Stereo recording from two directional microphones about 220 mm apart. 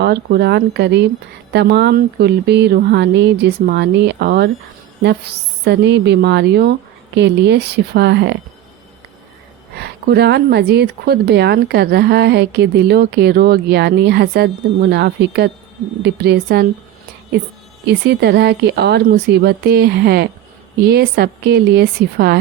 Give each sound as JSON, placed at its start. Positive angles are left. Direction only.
{"t": 0.0, "sound": "speech", "side_deg": -45}
{"t": 9.7, "sound": "speech", "side_deg": -45}
{"t": 17.8, "sound": "speech", "side_deg": -50}